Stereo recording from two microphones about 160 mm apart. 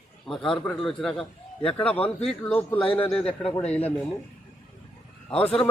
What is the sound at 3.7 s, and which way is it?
Speech, 10° left (ahead or behind).